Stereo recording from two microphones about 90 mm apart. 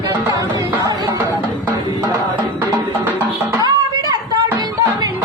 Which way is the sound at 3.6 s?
45° right (ahead or behind).